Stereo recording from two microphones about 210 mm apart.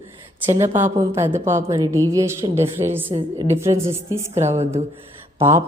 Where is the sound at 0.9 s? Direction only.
10° right (ahead or behind).